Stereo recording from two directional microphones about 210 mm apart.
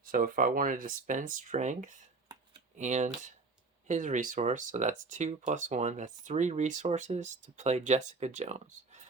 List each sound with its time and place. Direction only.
0.0 s speech: 40° right (ahead or behind)